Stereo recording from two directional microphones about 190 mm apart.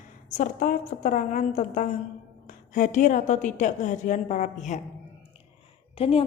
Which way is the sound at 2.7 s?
40° left (ahead or behind).